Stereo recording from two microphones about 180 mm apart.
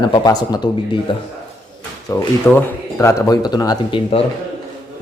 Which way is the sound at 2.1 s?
15° left (ahead or behind).